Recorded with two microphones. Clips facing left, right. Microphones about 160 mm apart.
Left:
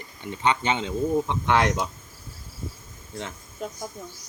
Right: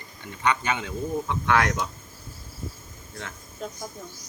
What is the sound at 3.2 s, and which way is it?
Speech, 20° left (ahead or behind).